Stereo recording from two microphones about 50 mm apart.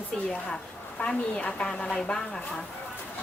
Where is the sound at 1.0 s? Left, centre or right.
Centre.